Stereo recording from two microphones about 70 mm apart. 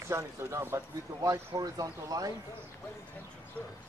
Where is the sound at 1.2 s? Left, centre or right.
Right.